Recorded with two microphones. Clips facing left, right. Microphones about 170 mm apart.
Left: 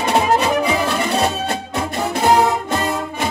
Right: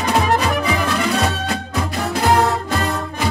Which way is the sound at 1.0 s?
35° left (ahead or behind).